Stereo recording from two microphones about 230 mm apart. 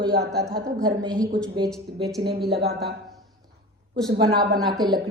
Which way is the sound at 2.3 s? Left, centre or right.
Right.